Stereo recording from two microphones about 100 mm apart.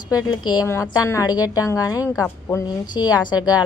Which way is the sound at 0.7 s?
30° left (ahead or behind).